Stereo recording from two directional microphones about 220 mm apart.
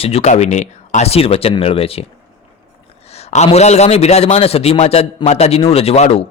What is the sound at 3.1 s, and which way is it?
Speech, 30° left (ahead or behind).